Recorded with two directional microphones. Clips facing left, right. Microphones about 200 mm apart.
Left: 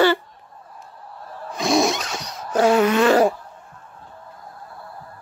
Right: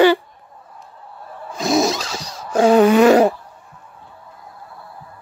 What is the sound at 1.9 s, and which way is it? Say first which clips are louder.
Zipper: right 2 dB; 30° right (ahead or behind).